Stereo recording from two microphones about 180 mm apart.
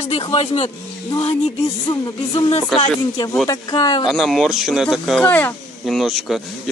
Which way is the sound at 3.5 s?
20° left (ahead or behind).